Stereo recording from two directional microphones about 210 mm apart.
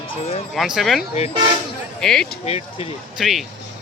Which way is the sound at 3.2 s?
Centre (ahead or behind).